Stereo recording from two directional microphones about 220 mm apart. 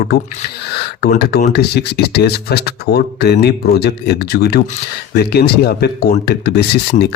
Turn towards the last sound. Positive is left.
turn(degrees=45)  # may be behind; listen again after turning